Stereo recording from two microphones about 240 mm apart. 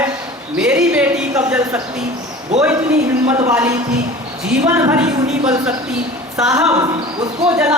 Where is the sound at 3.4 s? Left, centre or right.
Centre.